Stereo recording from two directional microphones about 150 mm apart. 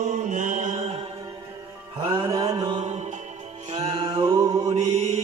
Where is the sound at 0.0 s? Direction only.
55° right (ahead or behind).